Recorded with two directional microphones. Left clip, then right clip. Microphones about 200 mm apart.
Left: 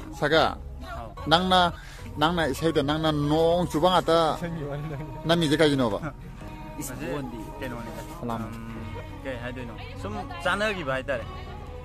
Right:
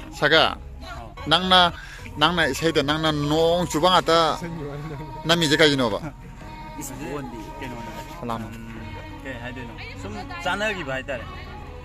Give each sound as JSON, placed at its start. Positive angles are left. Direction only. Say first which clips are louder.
{"t": 0.2, "sound": "a man's voice", "louder": "right 4 dB", "side_deg": 0}
{"t": 4.4, "sound": "speech", "louder": "even", "side_deg": 50}
{"t": 5.2, "sound": "a man's voice", "louder": "right 4 dB", "side_deg": 5}
{"t": 9.3, "sound": "a man's voice", "louder": "even", "side_deg": 0}